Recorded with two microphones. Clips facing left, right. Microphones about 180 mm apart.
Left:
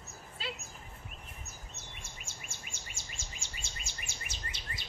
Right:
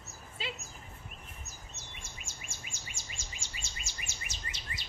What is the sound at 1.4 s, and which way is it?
Bird, 55° left (ahead or behind).